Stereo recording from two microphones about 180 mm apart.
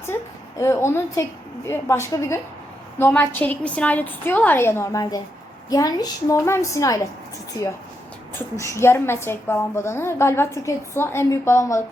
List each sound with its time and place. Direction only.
0.6 s a woman's voice: 15° left (ahead or behind)
8.4 s a woman's voice: 15° left (ahead or behind)